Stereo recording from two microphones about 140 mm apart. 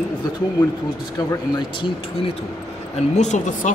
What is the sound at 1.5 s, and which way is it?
Speech, 30° left (ahead or behind).